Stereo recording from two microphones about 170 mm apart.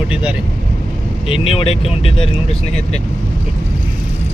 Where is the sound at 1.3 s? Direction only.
35° left (ahead or behind).